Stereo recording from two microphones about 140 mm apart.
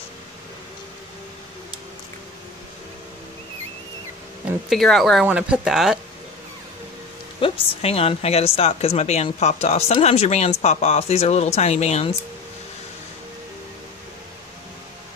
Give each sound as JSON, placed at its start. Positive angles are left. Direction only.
{"t": 4.6, "sound": "speech", "side_deg": 0}
{"t": 5.2, "sound": "speech", "side_deg": -10}
{"t": 7.3, "sound": "a woman's voice", "side_deg": 40}